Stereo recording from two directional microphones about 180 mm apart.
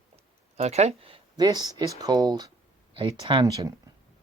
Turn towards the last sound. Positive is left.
turn(degrees=-20)  # may be behind; listen again after turning